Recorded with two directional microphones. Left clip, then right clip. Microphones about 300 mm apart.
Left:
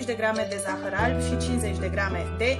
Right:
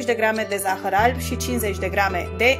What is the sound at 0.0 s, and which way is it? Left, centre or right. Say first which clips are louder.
Speech: right 5 dB; right.